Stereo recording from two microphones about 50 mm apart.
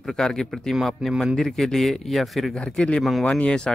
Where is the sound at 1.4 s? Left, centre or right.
Centre.